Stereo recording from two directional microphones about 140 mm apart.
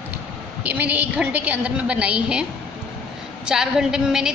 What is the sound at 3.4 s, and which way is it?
Speech, 5° right (ahead or behind).